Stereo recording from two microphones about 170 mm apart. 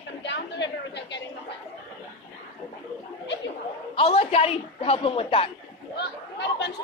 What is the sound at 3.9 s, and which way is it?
A woman's voice, 35° left (ahead or behind).